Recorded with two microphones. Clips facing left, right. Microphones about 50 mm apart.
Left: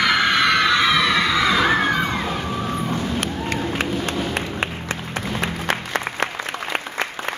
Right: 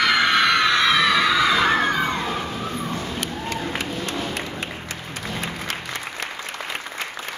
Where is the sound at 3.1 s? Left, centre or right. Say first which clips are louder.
Left 3 dB; left.